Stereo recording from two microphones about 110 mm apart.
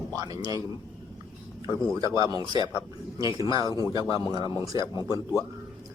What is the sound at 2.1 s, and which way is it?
Speech, 30° right (ahead or behind).